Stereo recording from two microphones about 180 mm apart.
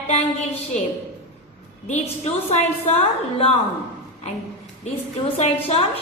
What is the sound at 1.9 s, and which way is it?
A woman's voice, 40° left (ahead or behind).